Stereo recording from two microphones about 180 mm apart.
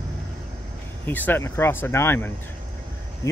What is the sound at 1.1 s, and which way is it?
Speech, 10° left (ahead or behind).